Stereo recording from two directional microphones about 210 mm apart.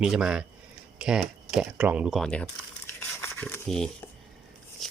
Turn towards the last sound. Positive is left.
turn(degrees=5)  # may be behind; listen again after turning